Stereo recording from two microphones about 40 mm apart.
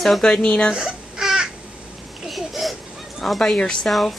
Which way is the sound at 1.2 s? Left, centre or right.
Centre.